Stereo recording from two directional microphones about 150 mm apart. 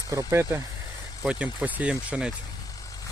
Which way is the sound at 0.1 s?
20° right (ahead or behind).